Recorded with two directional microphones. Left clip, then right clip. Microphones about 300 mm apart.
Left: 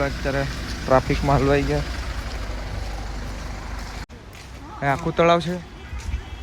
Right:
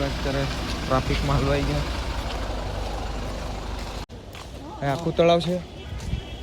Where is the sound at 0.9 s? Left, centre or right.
Left.